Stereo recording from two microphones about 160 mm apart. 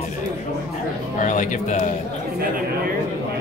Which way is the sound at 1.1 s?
50° left (ahead or behind).